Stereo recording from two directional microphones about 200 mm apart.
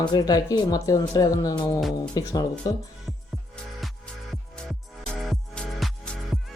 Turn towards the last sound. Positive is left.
turn(degrees=0)  # may be behind; listen again after turning